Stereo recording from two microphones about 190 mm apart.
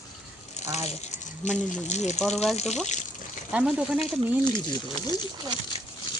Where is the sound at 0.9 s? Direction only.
35° left (ahead or behind).